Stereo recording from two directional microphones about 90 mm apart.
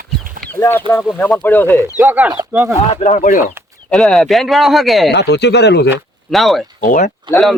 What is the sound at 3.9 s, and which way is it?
Speech, centre (ahead or behind).